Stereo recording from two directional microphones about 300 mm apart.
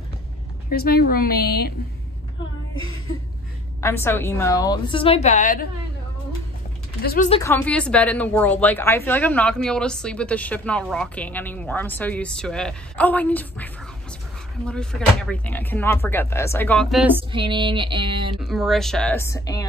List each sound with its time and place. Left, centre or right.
0.7 s a woman's voice: left
3.8 s a woman's voice: centre; by 5.7 s left
7.0 s speech: left
7.2 s speech: centre
14.7 s speech: centre
17.3 s a sound: centre
18.4 s speech: centre